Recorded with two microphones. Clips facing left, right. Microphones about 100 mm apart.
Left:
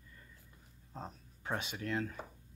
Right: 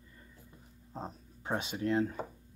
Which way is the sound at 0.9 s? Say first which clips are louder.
Right 4 dB; 20° right (ahead or behind).